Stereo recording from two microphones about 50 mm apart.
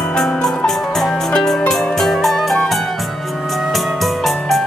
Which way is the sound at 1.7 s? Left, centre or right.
Centre.